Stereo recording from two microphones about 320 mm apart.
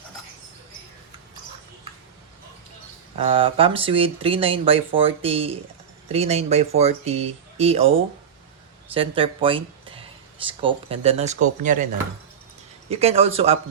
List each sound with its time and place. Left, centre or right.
3.2 s speech: centre
12.9 s speech: centre